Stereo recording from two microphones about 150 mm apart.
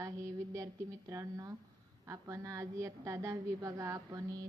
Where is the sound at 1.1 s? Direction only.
20° right (ahead or behind).